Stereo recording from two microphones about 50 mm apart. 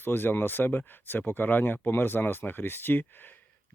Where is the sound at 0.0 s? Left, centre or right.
Left.